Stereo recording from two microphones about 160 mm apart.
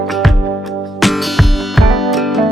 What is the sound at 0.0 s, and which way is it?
Music, centre (ahead or behind).